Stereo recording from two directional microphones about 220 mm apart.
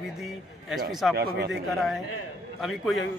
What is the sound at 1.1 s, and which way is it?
Speech, 45° right (ahead or behind).